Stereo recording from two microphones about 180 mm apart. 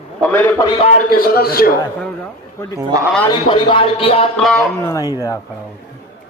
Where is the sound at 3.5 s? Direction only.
30° left (ahead or behind).